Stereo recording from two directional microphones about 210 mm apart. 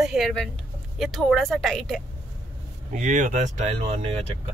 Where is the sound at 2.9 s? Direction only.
35° right (ahead or behind).